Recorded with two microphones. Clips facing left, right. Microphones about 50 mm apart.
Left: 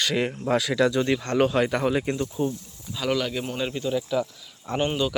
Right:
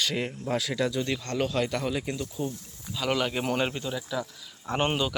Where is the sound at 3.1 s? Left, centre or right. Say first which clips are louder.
Left 2 dB; centre.